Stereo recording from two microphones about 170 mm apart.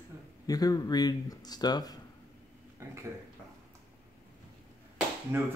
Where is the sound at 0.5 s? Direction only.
20° left (ahead or behind).